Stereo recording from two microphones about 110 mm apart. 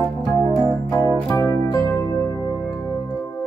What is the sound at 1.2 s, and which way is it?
Music, 20° left (ahead or behind).